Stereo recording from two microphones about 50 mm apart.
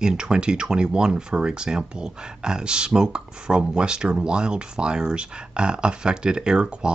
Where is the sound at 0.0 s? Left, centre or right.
Centre.